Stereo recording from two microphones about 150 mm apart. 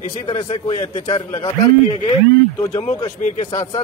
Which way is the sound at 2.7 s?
45° left (ahead or behind).